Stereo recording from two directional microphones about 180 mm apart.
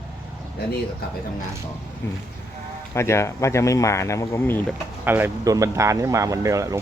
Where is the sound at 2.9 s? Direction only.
15° left (ahead or behind).